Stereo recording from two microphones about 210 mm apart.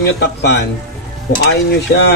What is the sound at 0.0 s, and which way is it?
Speech, 55° left (ahead or behind).